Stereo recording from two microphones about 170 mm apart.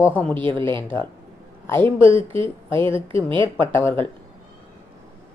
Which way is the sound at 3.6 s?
15° left (ahead or behind).